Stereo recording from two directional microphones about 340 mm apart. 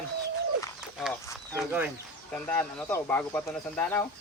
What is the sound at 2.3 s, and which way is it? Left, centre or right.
Speech, centre.